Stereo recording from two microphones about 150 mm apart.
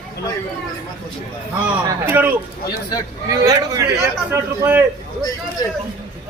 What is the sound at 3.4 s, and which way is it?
Speech, 25° right (ahead or behind).